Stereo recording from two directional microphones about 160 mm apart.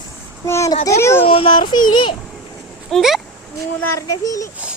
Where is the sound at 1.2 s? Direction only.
35° left (ahead or behind).